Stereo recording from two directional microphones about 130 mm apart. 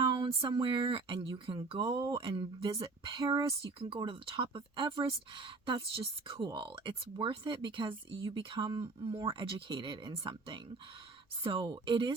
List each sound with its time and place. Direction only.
0.2 s speech: 40° right (ahead or behind)